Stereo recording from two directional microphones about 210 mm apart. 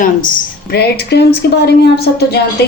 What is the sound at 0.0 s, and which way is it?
A woman's voice, 40° left (ahead or behind).